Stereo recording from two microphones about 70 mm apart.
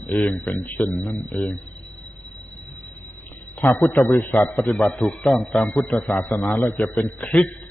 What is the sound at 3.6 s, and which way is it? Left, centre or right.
Speech, left.